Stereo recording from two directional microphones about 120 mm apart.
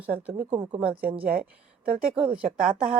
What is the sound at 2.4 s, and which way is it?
Speech, 50° right (ahead or behind).